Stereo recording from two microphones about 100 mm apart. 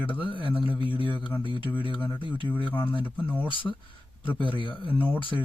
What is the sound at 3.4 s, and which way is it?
Speech, 55° left (ahead or behind).